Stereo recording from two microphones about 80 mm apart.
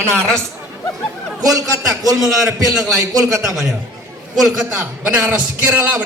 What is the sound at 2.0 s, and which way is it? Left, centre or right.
Speech, right.